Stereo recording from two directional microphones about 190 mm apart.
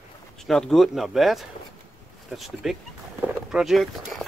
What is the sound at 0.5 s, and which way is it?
Speech, centre (ahead or behind).